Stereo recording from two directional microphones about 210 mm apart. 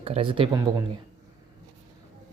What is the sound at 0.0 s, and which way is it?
Speech, 25° right (ahead or behind).